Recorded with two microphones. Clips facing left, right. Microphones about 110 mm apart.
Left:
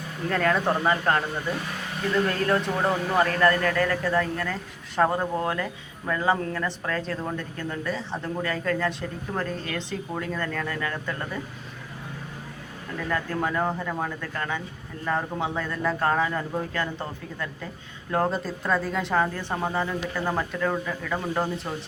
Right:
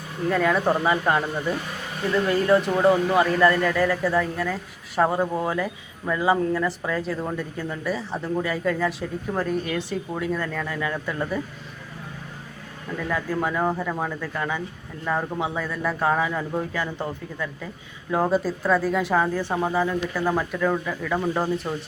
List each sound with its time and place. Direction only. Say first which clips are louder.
0.3 s speech: right 2 dB; 5° right (ahead or behind)
13.1 s speech: right 1 dB; 5° right (ahead or behind)